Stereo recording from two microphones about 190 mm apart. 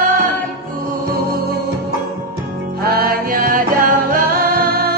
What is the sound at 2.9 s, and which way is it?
Music, 50° right (ahead or behind).